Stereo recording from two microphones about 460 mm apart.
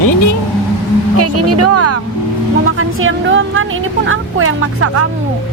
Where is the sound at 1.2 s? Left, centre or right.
Right.